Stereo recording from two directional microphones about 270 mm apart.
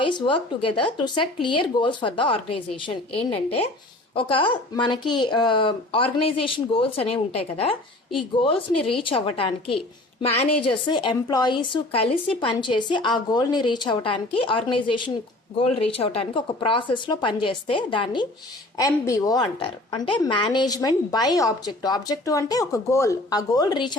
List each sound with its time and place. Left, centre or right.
0.0 s a woman's voice: centre